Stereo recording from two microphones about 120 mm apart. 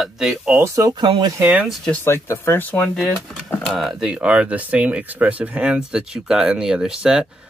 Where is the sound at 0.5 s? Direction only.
25° right (ahead or behind).